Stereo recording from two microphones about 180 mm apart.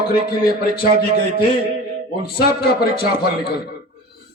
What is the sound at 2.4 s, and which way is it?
A man's voice, 60° left (ahead or behind).